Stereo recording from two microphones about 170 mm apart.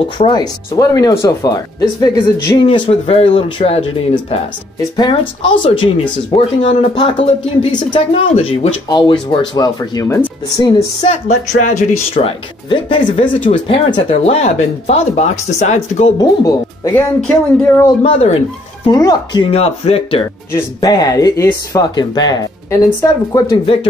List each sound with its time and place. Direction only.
0.2 s speech: 25° left (ahead or behind)
8.8 s speech: 25° left (ahead or behind)
11.1 s speech: 40° left (ahead or behind)
16.2 s speech: 20° left (ahead or behind)
16.9 s speech: 10° left (ahead or behind)
18.9 s speech: 25° left (ahead or behind)
20.5 s speech: 20° left (ahead or behind)